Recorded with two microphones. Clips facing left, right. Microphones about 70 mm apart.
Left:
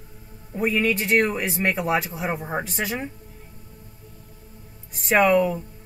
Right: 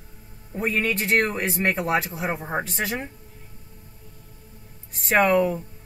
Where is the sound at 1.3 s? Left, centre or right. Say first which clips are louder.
Even; centre.